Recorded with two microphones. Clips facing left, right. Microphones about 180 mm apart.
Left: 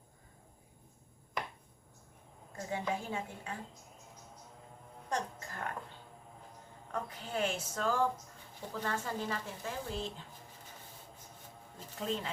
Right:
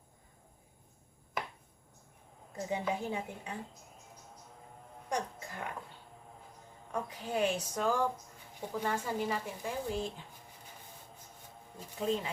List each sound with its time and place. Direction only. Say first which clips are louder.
2.6 s a woman's voice: right 2 dB; 20° right (ahead or behind)
5.0 s music: right 1 dB; 15° right (ahead or behind)
6.9 s speech: right 3 dB; 15° right (ahead or behind)
11.9 s speech: right 4 dB; 10° right (ahead or behind)